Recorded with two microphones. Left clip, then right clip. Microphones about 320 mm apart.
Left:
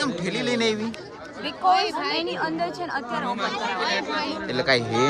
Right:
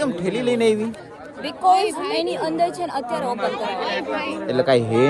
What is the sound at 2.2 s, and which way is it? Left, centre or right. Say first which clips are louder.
A man's voice: right 5 dB; centre.